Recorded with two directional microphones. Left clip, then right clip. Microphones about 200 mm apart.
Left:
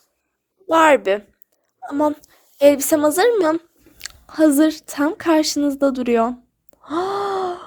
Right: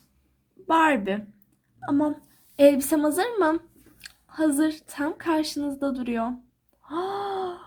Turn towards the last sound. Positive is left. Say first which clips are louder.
# left 7 dB
turn(degrees=50)  # may be behind; listen again after turning